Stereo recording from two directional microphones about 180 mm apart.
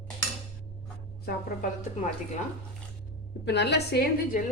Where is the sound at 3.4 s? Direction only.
70° left (ahead or behind).